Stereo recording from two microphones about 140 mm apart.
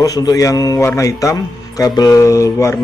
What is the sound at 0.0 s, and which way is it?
A man's voice, 25° left (ahead or behind).